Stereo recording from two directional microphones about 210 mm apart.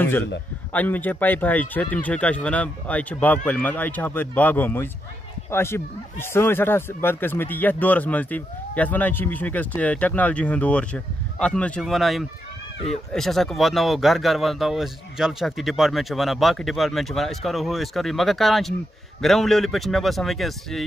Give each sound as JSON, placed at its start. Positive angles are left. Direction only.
{"t": 0.7, "sound": "speech", "side_deg": 10}